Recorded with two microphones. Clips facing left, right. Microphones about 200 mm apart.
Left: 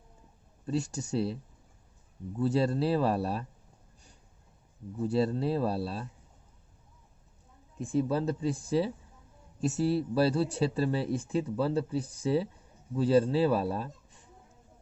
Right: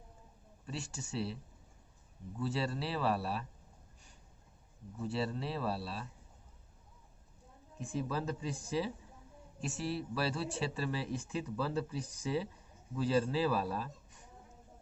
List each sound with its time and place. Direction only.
0.6 s speech: 40° left (ahead or behind)
2.4 s speech: 40° left (ahead or behind)
5.0 s speech: 40° left (ahead or behind)
7.8 s speech: 30° left (ahead or behind)